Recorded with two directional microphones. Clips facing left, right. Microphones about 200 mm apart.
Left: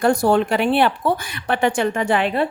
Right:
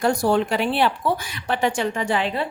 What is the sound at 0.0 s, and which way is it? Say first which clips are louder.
A woman's voice: left 3 dB; 55° left (ahead or behind).